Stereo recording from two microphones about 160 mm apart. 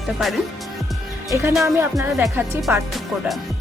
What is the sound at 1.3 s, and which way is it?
Speech, 20° right (ahead or behind).